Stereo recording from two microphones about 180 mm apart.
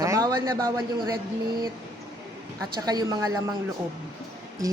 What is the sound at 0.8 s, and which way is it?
Speech, 25° right (ahead or behind).